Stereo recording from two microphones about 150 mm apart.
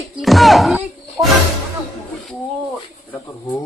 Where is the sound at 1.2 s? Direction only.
20° right (ahead or behind).